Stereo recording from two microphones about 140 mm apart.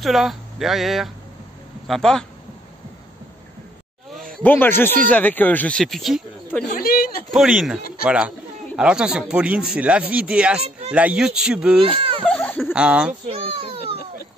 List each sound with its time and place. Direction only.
0.0 s speech: centre (ahead or behind)
4.4 s speech: 15° left (ahead or behind)
6.7 s a sound: 90° left
7.2 s speech: 5° right (ahead or behind)
11.8 s speech: 40° right (ahead or behind)
12.3 s a sound: 10° left (ahead or behind)
12.7 s speech: 5° right (ahead or behind)
13.3 s a child's voice: 45° right (ahead or behind)